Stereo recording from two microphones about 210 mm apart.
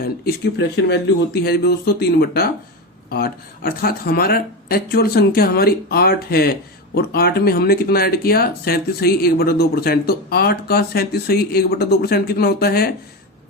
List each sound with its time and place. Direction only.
0.0 s speech: 50° left (ahead or behind)